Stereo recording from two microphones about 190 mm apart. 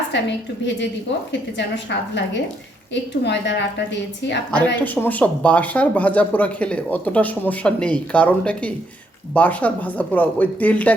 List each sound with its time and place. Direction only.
0.1 s a woman's voice: 70° left (ahead or behind)
4.5 s speech: 10° left (ahead or behind)